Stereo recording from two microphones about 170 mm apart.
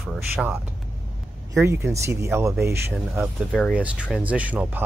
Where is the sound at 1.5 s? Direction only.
15° right (ahead or behind).